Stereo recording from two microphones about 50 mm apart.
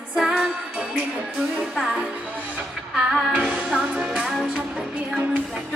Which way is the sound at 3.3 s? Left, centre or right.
Right.